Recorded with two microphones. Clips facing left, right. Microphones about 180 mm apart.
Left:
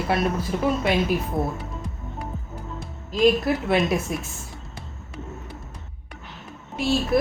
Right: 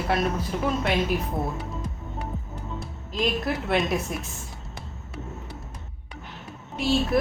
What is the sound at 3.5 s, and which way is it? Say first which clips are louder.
Speech: left 3 dB; centre (ahead or behind).